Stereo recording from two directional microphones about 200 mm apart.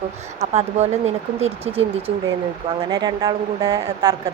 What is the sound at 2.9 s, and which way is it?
Speech, 20° right (ahead or behind).